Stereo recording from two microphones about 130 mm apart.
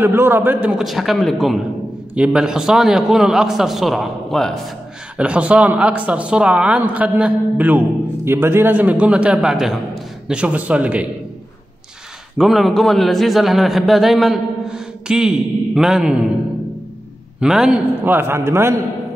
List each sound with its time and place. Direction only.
0.0 s a man's voice: 15° right (ahead or behind); by 4.7 s centre (ahead or behind)
5.1 s speech: 10° right (ahead or behind)
12.4 s a man's voice: centre (ahead or behind)
17.4 s speech: 5° right (ahead or behind)